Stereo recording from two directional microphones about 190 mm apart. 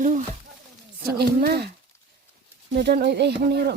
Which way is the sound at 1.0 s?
55° right (ahead or behind).